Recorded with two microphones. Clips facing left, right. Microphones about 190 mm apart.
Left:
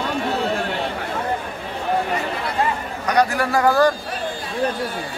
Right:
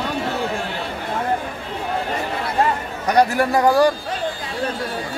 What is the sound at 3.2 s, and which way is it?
Speech, 25° right (ahead or behind).